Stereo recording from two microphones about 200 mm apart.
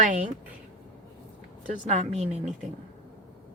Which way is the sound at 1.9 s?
30° right (ahead or behind).